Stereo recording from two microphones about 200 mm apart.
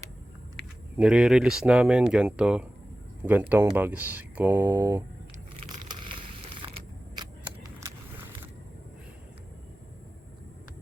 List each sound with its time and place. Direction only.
0.9 s speech: 5° right (ahead or behind)
5.5 s crushing: 25° right (ahead or behind)